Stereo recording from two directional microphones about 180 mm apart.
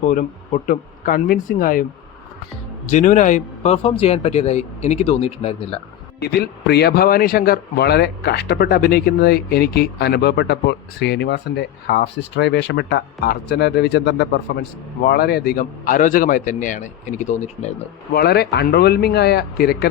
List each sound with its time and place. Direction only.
0.0 s a man's voice: 45° left (ahead or behind)
2.9 s a man's voice: 45° left (ahead or behind)
6.1 s a man's voice: 65° left (ahead or behind); by 17.7 s 40° left (ahead or behind)
18.1 s speech: 60° left (ahead or behind)